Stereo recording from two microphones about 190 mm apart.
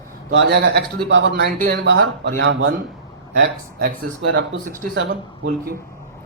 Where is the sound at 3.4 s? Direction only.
50° right (ahead or behind).